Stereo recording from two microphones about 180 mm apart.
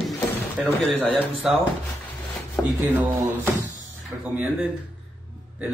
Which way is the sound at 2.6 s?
15° left (ahead or behind).